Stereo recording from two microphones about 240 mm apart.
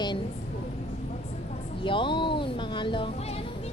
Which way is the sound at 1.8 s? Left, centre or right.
Left.